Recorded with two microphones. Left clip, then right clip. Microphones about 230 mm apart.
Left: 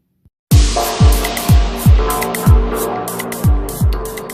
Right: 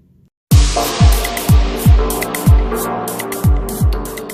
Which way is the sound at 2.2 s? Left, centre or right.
Centre.